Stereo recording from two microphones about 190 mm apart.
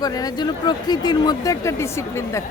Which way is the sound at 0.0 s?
20° left (ahead or behind).